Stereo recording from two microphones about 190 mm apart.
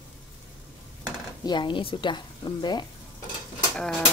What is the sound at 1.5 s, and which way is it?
Speech, 25° left (ahead or behind).